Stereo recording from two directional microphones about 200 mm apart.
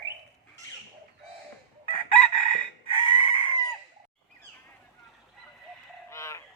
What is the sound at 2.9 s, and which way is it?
Chicken, 25° left (ahead or behind).